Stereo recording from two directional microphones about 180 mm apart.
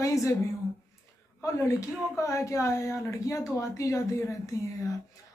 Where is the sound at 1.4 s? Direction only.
15° left (ahead or behind).